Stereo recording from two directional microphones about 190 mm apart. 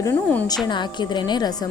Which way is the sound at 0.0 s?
10° left (ahead or behind).